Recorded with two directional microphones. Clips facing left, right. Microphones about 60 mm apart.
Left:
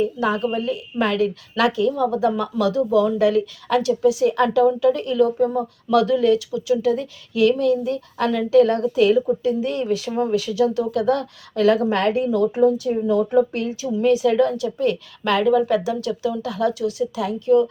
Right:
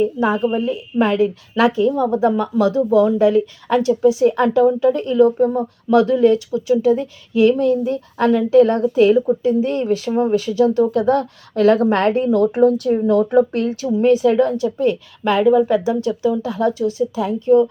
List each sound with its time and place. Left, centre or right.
0.0 s a woman's voice: right